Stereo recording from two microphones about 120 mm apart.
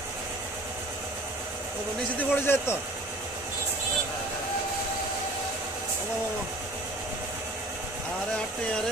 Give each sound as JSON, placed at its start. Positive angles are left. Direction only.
{"t": 2.1, "sound": "a man's voice", "side_deg": 20}